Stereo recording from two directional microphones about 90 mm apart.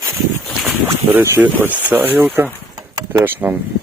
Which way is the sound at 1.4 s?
20° right (ahead or behind).